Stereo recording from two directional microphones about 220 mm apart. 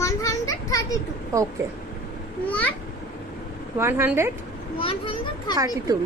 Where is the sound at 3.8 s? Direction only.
10° right (ahead or behind).